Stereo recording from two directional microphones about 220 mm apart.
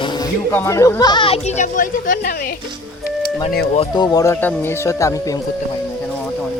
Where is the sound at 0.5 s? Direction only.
15° left (ahead or behind); by 2.3 s 35° left (ahead or behind).